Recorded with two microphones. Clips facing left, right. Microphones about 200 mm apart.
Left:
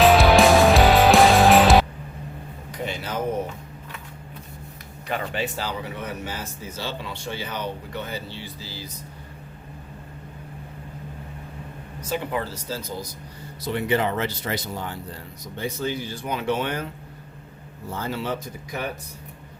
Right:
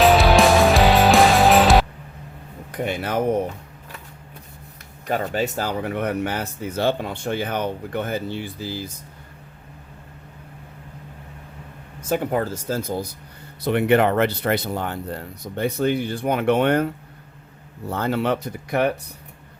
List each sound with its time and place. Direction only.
0.0 s music: centre (ahead or behind)
2.7 s a sound: 55° right (ahead or behind)
5.0 s speech: 40° right (ahead or behind)
12.0 s speech: 50° right (ahead or behind); by 18.9 s 65° right (ahead or behind)